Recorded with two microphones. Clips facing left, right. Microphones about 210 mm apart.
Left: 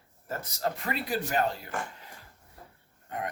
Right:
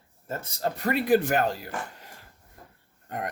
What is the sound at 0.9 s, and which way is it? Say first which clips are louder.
Speech: right 11 dB; 55° right (ahead or behind).